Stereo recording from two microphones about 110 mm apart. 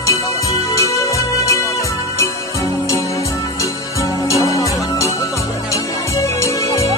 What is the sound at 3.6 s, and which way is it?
Music, 30° left (ahead or behind).